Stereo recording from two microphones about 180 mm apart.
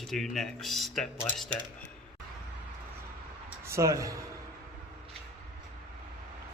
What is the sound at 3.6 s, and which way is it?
Speech, 15° right (ahead or behind).